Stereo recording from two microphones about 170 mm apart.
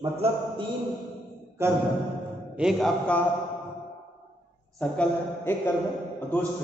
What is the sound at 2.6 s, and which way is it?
Speech, centre (ahead or behind).